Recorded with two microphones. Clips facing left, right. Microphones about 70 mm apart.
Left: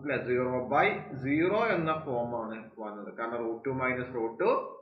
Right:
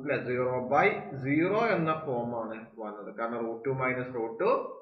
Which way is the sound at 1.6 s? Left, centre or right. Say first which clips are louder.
Right 1 dB; centre.